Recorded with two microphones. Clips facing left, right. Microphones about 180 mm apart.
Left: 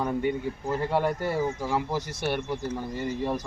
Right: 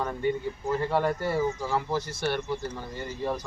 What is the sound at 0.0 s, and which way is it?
Speech, 10° left (ahead or behind).